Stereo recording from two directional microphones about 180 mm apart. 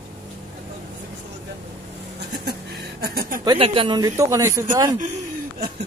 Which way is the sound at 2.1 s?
65° right (ahead or behind).